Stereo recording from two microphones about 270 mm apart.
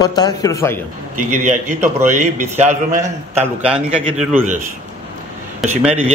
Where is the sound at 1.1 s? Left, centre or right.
Right.